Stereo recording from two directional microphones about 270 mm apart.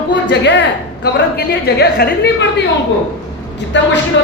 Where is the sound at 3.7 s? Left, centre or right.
Left.